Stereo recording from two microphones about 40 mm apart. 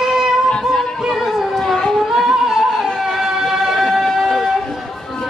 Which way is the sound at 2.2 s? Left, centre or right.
Centre.